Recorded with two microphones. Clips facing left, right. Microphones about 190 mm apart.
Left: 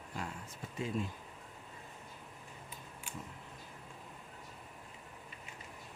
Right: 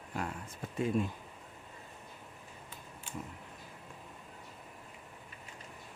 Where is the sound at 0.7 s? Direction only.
55° right (ahead or behind).